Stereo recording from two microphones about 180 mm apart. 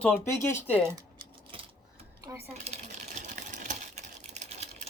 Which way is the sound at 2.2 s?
15° right (ahead or behind).